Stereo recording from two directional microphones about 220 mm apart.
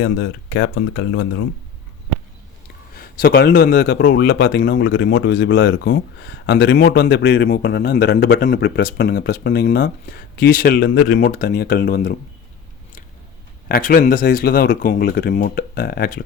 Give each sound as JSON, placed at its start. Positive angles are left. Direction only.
{"t": 0.0, "sound": "speech", "side_deg": 50}
{"t": 2.9, "sound": "a man's voice", "side_deg": 40}
{"t": 13.7, "sound": "speech", "side_deg": 40}